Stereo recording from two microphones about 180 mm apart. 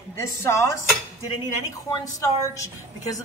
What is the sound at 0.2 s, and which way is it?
A woman's voice, 15° left (ahead or behind).